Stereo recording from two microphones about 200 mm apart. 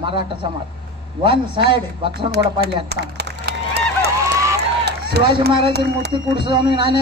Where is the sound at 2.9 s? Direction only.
55° right (ahead or behind).